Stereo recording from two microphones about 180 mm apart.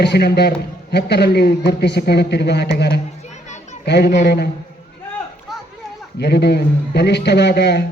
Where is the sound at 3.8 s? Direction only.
70° left (ahead or behind).